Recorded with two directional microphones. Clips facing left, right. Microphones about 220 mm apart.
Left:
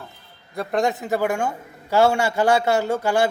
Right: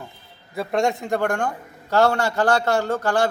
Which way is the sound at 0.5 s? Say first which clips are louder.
Even; centre (ahead or behind).